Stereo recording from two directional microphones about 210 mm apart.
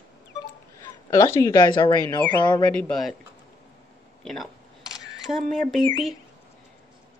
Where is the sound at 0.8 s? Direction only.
15° left (ahead or behind).